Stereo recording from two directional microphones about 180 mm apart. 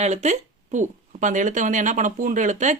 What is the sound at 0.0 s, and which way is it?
Speech, 40° right (ahead or behind).